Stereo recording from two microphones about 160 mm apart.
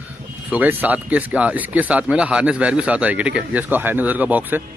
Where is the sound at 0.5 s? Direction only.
10° right (ahead or behind).